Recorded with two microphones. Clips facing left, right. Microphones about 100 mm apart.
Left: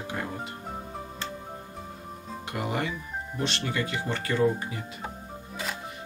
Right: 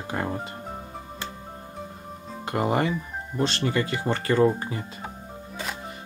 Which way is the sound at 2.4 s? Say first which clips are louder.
Right 7 dB; 35° right (ahead or behind).